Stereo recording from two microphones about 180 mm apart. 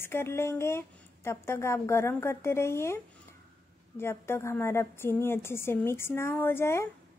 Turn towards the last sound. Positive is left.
turn(degrees=15)  # may be behind; listen again after turning